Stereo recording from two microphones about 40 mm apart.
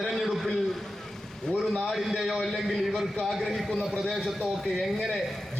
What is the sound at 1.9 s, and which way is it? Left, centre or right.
A man's voice, centre.